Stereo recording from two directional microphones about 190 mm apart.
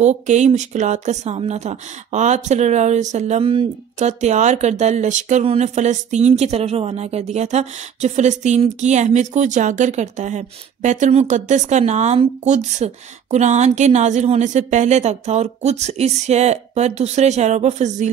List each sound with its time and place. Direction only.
0.0 s speech: 35° right (ahead or behind)